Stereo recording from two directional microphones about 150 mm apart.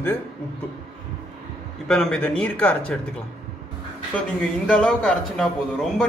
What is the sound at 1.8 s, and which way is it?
A man's voice, 5° left (ahead or behind).